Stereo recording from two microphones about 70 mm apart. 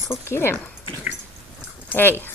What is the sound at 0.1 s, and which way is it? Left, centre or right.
Speech, left.